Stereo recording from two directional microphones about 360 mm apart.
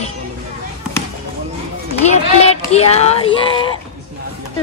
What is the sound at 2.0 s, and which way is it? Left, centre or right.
A child's voice, centre.